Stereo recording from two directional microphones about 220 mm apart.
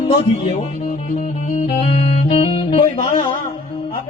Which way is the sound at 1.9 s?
25° left (ahead or behind).